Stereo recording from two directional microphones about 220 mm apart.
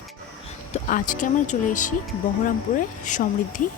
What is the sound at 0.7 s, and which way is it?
Speech, 35° left (ahead or behind).